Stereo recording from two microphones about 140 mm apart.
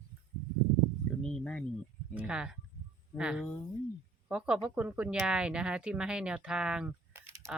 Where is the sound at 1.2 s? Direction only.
5° left (ahead or behind).